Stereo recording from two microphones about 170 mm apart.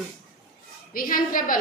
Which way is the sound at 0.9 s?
55° left (ahead or behind).